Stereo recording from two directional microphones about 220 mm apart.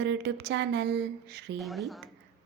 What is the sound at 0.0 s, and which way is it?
A woman's voice, 55° right (ahead or behind).